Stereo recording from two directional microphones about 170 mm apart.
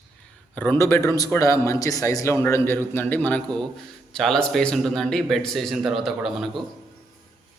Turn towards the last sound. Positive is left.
turn(degrees=0)  # may be behind; listen again after turning